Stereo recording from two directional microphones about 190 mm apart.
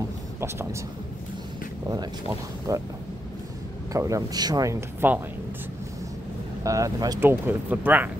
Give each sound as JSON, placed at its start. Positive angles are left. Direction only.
{"t": 0.4, "sound": "speech", "side_deg": -15}
{"t": 1.9, "sound": "speech", "side_deg": -20}
{"t": 3.9, "sound": "speech", "side_deg": -15}
{"t": 6.6, "sound": "speech", "side_deg": -15}